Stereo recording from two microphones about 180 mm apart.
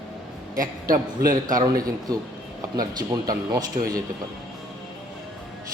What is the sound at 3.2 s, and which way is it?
Speech, 20° right (ahead or behind).